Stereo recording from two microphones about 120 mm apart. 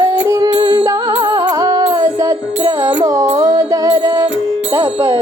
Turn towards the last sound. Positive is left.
turn(degrees=-25)  # may be behind; listen again after turning